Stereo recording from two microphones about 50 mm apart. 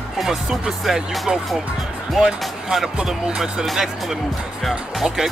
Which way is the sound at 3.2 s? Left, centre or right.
Centre.